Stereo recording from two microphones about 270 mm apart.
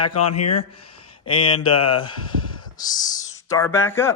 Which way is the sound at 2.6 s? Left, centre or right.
Centre.